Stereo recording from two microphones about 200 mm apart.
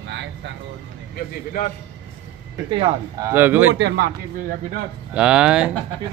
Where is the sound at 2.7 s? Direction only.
25° right (ahead or behind).